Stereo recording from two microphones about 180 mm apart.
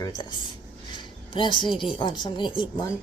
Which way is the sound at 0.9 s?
25° left (ahead or behind).